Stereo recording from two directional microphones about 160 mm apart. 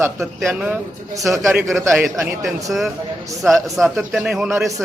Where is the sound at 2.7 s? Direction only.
Centre (ahead or behind).